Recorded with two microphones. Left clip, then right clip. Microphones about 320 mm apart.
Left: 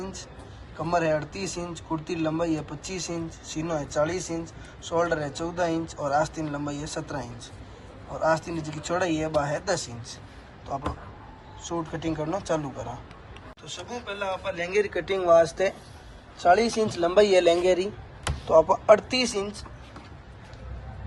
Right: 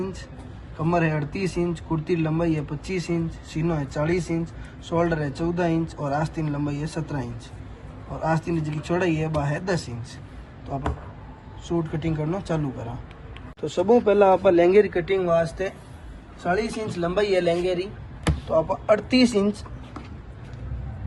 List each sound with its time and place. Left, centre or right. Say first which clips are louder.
0.0 s a sound: right 5 dB; centre
0.9 s speech: even; centre
11.6 s speech: right 3 dB; centre
13.6 s a man's voice: right 18 dB; centre